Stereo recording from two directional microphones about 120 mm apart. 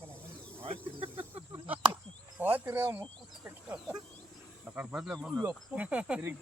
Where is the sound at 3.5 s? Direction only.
10° right (ahead or behind).